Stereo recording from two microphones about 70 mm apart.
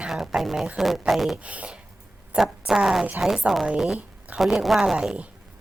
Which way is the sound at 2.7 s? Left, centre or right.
Centre.